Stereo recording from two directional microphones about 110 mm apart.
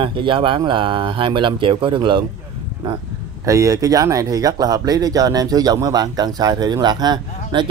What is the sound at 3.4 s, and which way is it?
Speech, 30° right (ahead or behind).